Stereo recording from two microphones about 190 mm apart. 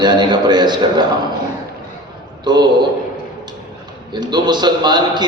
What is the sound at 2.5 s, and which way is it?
Speech, 20° right (ahead or behind).